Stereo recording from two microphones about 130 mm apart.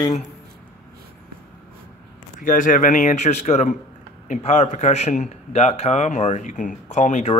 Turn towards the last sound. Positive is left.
turn(degrees=65)  # may be behind; listen again after turning